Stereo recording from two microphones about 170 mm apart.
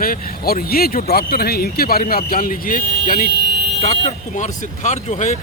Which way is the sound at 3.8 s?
40° left (ahead or behind).